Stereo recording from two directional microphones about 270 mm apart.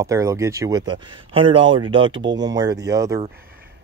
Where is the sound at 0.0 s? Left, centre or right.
Centre.